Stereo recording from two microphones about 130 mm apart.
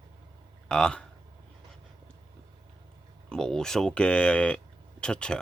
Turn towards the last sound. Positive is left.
turn(degrees=5)  # may be behind; listen again after turning